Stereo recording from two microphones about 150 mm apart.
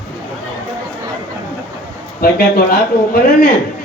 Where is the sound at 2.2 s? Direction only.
85° left.